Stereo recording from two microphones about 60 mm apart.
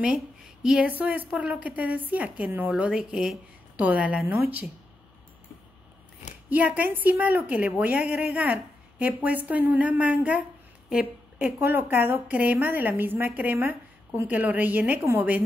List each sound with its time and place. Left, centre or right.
0.0 s a sound: centre
0.8 s a woman's voice: right
2.7 s a woman's voice: centre
3.7 s a woman's voice: right
6.5 s a woman's voice: right